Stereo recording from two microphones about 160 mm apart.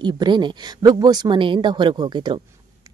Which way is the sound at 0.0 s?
25° right (ahead or behind).